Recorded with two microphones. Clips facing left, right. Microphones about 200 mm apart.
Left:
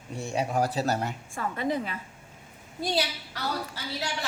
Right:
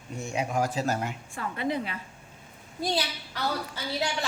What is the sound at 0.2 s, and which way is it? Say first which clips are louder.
A woman's voice: left 1 dB; 35° left (ahead or behind).